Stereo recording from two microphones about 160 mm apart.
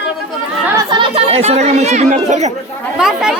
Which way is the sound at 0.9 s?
35° right (ahead or behind).